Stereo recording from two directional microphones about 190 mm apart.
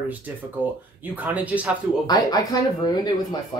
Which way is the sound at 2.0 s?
20° left (ahead or behind).